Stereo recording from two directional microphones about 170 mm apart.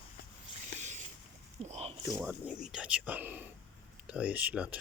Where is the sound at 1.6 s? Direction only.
40° right (ahead or behind).